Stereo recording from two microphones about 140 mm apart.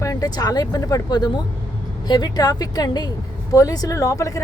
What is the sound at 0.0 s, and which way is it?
Speech, 25° left (ahead or behind).